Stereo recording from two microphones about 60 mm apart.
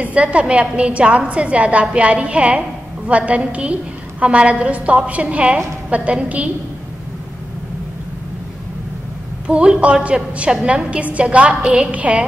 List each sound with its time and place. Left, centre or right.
0.0 s a woman's voice: right
9.5 s a woman's voice: centre